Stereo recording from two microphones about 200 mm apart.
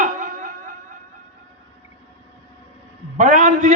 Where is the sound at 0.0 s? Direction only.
40° right (ahead or behind).